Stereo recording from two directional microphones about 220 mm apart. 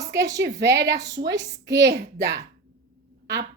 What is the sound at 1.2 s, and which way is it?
A woman's voice, 50° right (ahead or behind).